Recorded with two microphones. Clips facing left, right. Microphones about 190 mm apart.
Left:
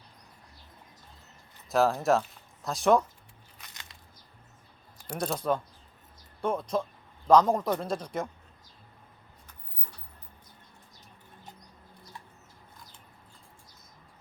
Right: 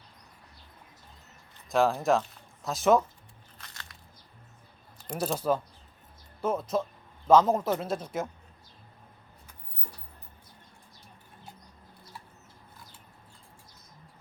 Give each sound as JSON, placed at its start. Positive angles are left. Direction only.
{"t": 1.7, "sound": "a man's voice", "side_deg": 0}
{"t": 3.6, "sound": "biting", "side_deg": 20}
{"t": 5.1, "sound": "a man's voice", "side_deg": -5}